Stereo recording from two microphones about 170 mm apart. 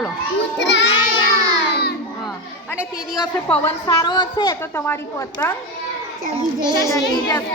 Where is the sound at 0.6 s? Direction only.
90° left.